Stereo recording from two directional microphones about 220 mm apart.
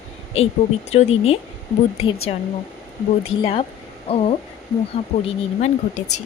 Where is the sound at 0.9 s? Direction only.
30° left (ahead or behind).